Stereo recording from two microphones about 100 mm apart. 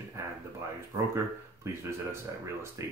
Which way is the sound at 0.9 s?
25° right (ahead or behind).